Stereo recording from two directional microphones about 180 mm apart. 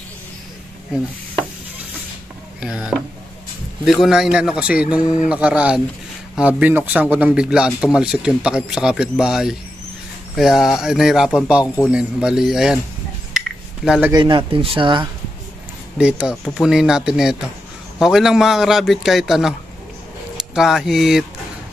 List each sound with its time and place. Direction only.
2.6 s speech: 5° right (ahead or behind)
13.8 s speech: 5° right (ahead or behind)
14.1 s speech: 25° right (ahead or behind)
16.0 s speech: 5° right (ahead or behind)
20.5 s speech: centre (ahead or behind)